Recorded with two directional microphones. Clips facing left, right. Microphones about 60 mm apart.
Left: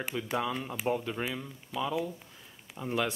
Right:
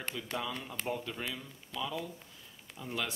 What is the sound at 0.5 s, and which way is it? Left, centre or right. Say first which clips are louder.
Speech: left 5 dB; centre.